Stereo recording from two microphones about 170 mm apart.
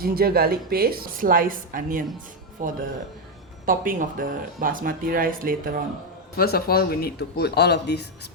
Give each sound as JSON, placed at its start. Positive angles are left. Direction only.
{"t": 0.0, "sound": "speech", "side_deg": -60}
{"t": 6.3, "sound": "speech", "side_deg": 65}